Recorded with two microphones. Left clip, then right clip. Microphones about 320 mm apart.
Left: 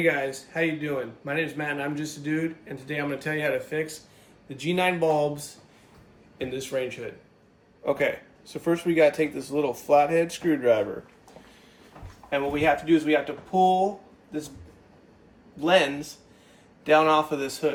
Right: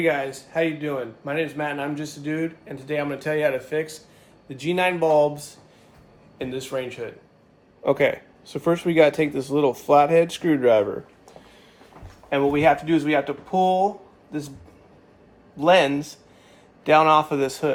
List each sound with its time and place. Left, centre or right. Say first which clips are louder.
0.0 s speech: right 2 dB; centre
7.9 s speech: right 5 dB; right
12.3 s speech: right 5 dB; right
15.5 s speech: right 4 dB; right